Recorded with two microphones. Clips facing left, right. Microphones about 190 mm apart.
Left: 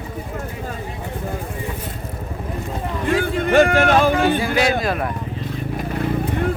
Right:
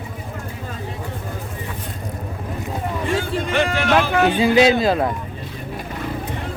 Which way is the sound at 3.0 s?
50° left (ahead or behind).